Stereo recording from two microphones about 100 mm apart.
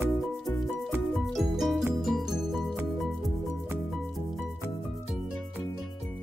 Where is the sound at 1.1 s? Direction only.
Centre (ahead or behind).